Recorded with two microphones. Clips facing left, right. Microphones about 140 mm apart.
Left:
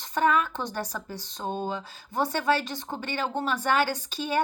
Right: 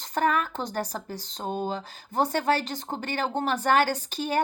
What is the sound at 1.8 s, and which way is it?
A woman's voice, 45° right (ahead or behind).